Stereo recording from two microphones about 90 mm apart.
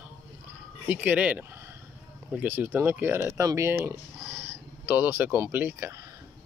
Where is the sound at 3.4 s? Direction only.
35° right (ahead or behind).